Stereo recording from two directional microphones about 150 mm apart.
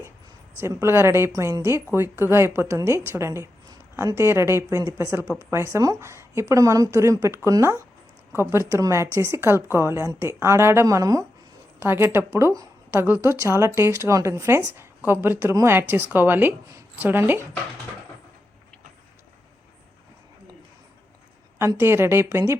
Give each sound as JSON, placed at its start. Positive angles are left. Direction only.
{"t": 0.5, "sound": "a woman's voice", "side_deg": -15}
{"t": 21.8, "sound": "a woman's voice", "side_deg": -15}